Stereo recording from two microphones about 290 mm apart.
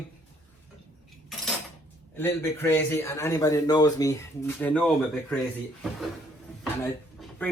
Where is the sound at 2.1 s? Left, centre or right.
Centre.